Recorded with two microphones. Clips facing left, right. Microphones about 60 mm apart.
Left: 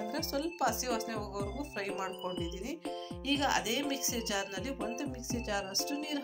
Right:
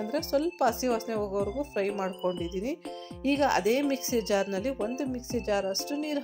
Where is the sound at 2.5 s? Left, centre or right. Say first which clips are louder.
Right 6 dB; right.